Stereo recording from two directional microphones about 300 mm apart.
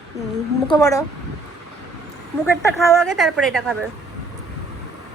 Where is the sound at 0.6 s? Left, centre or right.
Centre.